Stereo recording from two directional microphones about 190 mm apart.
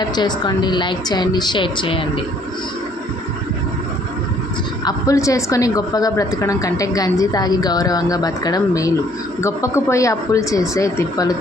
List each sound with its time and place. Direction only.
0.0 s a woman's voice: 20° left (ahead or behind)
4.9 s a woman's voice: 15° left (ahead or behind)